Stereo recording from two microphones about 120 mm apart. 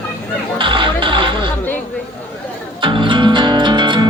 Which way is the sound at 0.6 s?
45° right (ahead or behind).